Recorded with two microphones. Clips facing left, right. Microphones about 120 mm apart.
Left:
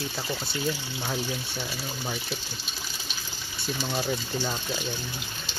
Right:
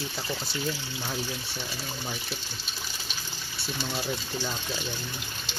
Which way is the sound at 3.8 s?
20° left (ahead or behind).